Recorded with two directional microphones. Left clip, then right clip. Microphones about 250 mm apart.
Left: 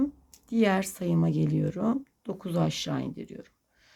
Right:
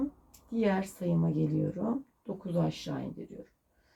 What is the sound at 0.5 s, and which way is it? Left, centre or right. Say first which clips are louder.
Speech: left 5 dB; left.